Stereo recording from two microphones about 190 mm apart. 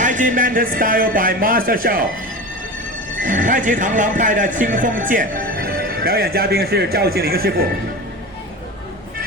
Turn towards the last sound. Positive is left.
turn(degrees=-55)  # may be behind; listen again after turning